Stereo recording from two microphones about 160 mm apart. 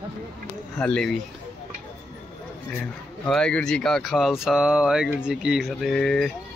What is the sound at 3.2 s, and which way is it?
Speech, 5° left (ahead or behind).